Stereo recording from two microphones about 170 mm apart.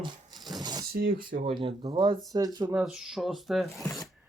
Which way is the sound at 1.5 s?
35° right (ahead or behind).